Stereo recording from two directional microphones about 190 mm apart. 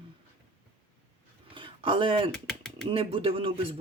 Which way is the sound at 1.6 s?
25° right (ahead or behind).